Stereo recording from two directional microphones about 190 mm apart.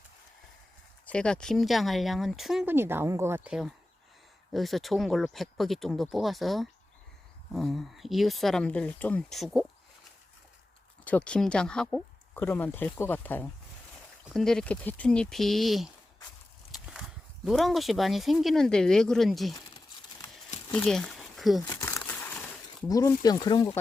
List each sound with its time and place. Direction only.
1.0 s speech: 5° left (ahead or behind)
11.0 s speech: 5° left (ahead or behind)
20.7 s speech: 5° left (ahead or behind)
21.6 s crumpling: 15° left (ahead or behind)
22.9 s speech: 20° left (ahead or behind)